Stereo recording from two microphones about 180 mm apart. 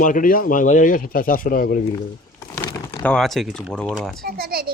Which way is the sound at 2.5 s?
25° left (ahead or behind).